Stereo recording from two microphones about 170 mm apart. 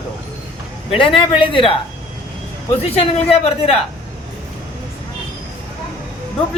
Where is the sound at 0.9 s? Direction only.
35° left (ahead or behind).